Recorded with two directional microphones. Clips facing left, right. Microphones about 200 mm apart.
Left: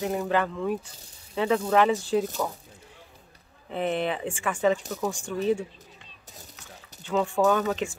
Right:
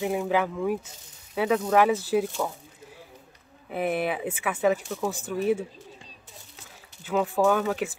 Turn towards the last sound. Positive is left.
turn(degrees=0)  # may be behind; listen again after turning